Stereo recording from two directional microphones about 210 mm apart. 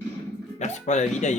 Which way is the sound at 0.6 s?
35° left (ahead or behind).